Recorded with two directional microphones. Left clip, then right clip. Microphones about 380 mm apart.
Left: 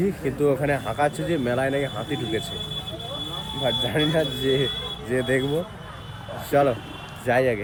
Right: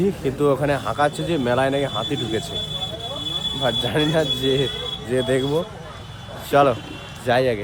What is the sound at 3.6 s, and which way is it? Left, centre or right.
Speech, centre.